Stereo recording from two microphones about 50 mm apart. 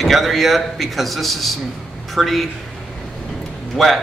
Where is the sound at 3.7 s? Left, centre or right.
Centre.